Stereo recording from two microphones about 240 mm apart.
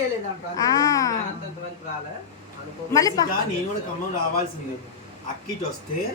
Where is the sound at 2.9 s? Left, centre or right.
Centre.